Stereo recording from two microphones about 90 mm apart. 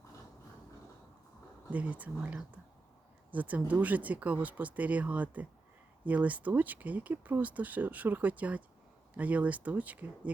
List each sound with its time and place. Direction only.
1.7 s speech: 15° right (ahead or behind)